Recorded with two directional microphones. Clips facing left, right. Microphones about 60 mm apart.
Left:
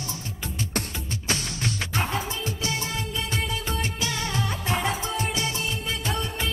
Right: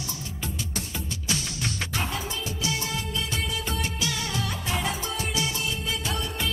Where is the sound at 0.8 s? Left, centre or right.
Left.